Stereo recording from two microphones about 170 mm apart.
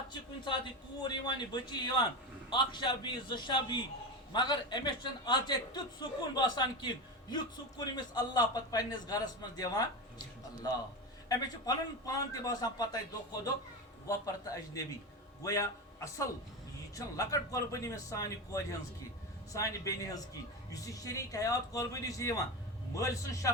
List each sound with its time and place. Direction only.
1.0 s a man's voice: 25° left (ahead or behind)
11.3 s a man's voice: 20° left (ahead or behind)
14.1 s a man's voice: 20° left (ahead or behind)